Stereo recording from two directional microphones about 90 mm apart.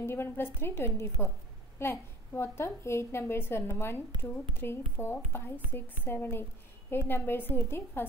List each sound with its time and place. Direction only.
0.0 s a woman's voice: 25° left (ahead or behind)